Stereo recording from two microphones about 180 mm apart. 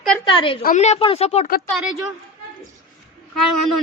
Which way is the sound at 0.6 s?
45° left (ahead or behind).